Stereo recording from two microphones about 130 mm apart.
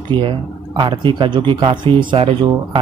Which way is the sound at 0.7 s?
35° right (ahead or behind).